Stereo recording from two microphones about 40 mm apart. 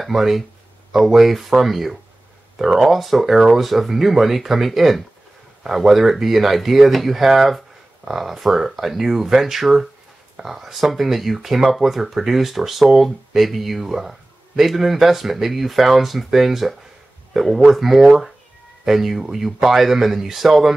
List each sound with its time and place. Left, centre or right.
0.0 s speech: centre